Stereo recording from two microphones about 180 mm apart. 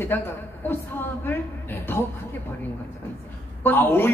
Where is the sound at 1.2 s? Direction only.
10° left (ahead or behind).